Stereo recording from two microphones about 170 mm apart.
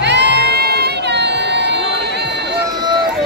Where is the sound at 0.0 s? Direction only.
90° right.